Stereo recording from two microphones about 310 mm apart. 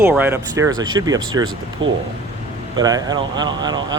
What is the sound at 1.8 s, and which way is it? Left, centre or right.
Speech, right.